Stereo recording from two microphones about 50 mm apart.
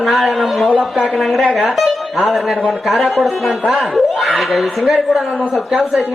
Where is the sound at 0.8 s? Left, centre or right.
Right.